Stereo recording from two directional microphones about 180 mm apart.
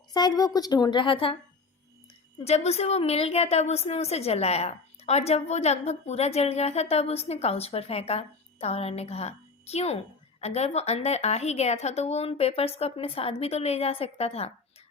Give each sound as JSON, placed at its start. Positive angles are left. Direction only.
{"t": 0.1, "sound": "a woman's voice", "side_deg": 25}
{"t": 2.4, "sound": "a woman's voice", "side_deg": 35}